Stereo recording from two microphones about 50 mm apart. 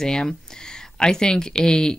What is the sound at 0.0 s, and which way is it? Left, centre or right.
Speech, centre.